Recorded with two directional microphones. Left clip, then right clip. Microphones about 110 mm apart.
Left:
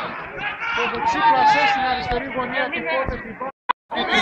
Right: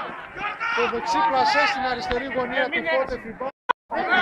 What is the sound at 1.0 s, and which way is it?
Speech, 35° right (ahead or behind).